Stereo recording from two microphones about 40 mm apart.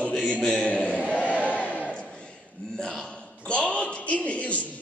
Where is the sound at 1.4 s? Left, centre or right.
Left.